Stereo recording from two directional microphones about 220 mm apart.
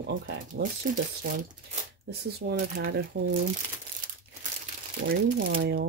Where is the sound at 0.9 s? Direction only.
40° right (ahead or behind).